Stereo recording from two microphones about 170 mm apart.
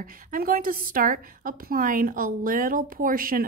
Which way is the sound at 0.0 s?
55° right (ahead or behind).